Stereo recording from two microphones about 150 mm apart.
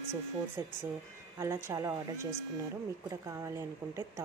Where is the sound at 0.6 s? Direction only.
20° right (ahead or behind).